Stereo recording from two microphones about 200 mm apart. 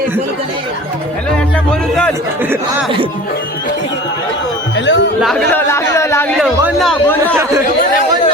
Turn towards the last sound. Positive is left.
turn(degrees=5)  # may be behind; listen again after turning